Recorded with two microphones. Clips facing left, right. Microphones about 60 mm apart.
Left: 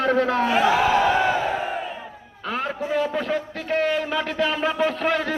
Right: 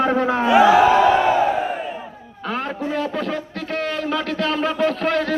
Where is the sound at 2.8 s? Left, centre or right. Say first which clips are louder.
Left 2 dB; centre.